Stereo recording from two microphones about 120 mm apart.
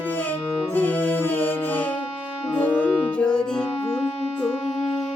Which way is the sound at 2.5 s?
10° left (ahead or behind).